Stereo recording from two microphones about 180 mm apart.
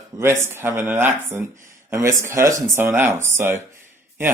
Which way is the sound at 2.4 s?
15° right (ahead or behind).